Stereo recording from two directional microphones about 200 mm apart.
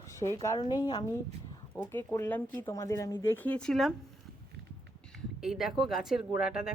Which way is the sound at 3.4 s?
5° left (ahead or behind).